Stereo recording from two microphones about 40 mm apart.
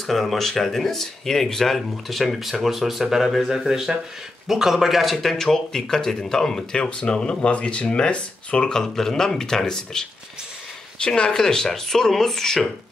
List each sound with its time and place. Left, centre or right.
0.0 s speech: centre; by 8.6 s left
8.6 s speech: centre
11.0 s speech: left